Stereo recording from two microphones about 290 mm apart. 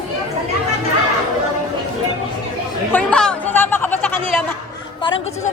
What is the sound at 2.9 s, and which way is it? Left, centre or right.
Chatter, centre.